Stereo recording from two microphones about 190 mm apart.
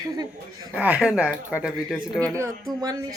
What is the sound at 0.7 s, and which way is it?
Speech, 5° right (ahead or behind).